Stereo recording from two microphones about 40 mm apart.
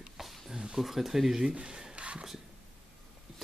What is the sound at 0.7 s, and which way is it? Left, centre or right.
Speech, centre.